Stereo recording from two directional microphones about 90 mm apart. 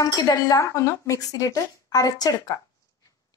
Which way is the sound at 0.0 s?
40° left (ahead or behind).